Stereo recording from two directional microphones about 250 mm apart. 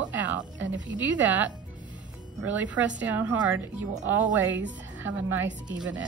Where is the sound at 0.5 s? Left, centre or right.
Right.